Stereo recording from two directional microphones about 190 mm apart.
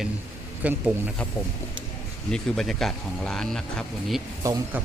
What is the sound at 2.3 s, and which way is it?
Speech, centre (ahead or behind).